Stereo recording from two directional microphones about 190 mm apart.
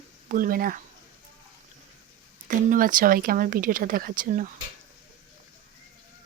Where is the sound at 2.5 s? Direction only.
45° right (ahead or behind).